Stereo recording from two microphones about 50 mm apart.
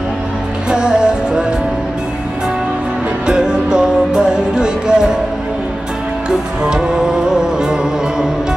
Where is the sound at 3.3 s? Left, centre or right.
Centre.